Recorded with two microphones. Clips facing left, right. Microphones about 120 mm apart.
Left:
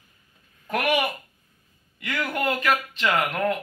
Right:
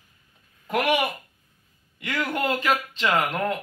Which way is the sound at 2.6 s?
30° right (ahead or behind).